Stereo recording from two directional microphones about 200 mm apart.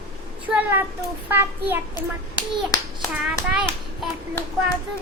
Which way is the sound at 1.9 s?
20° left (ahead or behind).